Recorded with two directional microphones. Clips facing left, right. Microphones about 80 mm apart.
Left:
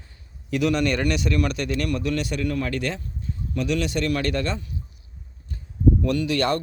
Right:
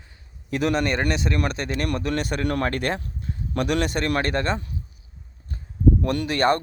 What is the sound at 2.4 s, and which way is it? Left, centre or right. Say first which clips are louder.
Speech: right 2 dB; right.